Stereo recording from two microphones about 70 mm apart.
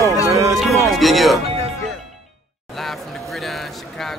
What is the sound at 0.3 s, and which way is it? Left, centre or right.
Music, right.